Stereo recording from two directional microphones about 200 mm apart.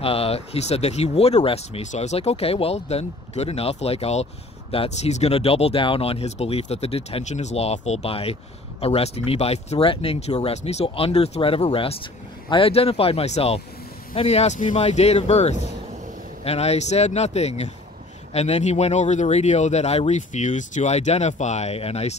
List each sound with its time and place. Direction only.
0.0 s speech: 30° left (ahead or behind)